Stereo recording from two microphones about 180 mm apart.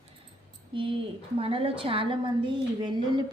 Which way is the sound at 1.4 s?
30° right (ahead or behind).